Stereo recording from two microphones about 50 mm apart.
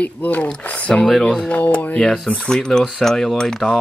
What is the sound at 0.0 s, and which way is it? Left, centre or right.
Speech, left.